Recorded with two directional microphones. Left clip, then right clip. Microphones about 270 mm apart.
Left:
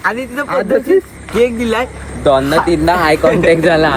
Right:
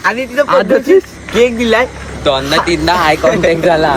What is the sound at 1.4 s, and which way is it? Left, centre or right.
Speech, centre.